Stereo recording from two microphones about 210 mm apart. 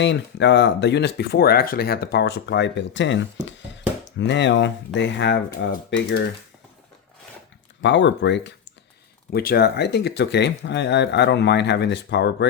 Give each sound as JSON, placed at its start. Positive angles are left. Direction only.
{"t": 0.0, "sound": "speech", "side_deg": 55}
{"t": 7.8, "sound": "speech", "side_deg": 60}
{"t": 9.3, "sound": "speech", "side_deg": 45}